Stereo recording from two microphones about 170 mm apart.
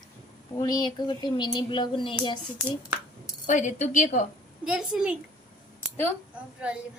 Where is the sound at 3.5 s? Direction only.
45° left (ahead or behind).